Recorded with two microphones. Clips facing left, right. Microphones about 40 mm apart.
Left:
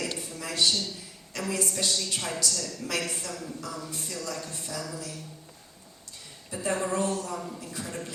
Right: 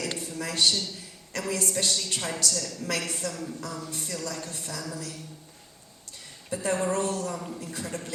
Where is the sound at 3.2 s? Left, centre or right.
Right.